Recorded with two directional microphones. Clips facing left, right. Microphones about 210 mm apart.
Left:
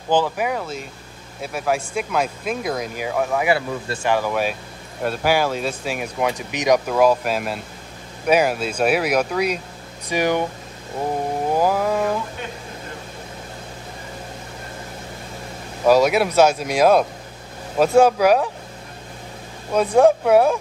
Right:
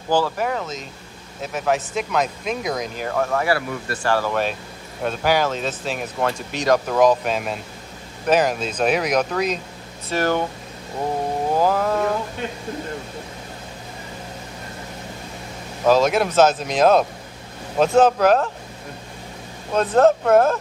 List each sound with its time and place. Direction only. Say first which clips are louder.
0.1 s speech: left 1 dB; 15° left (ahead or behind)
3.5 s speech: left 1 dB; 20° left (ahead or behind)
6.9 s speech: even; 5° left (ahead or behind)
11.5 s a sound: even; 10° left (ahead or behind)
15.8 s speech: left 1 dB; 10° left (ahead or behind)
19.7 s speech: left 1 dB; 10° left (ahead or behind)